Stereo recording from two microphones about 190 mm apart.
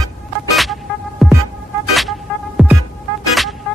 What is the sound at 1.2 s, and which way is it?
Music, centre (ahead or behind).